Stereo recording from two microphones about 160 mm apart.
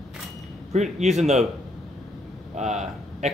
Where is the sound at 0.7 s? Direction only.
45° right (ahead or behind).